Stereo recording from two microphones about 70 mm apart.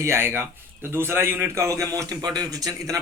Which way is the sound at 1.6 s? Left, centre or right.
Right.